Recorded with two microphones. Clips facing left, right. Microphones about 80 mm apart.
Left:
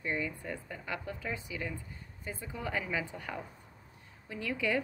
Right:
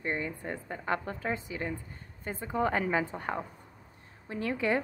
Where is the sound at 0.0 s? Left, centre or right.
Right.